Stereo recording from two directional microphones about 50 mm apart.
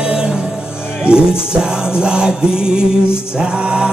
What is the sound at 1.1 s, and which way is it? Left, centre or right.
Speech, right.